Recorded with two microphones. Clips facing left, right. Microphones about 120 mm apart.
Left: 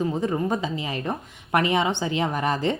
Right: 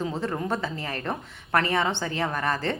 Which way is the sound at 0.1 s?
15° left (ahead or behind).